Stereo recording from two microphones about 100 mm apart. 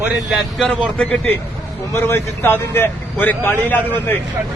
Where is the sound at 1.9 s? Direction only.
25° left (ahead or behind).